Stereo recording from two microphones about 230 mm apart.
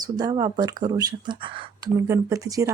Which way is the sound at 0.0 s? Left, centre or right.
Centre.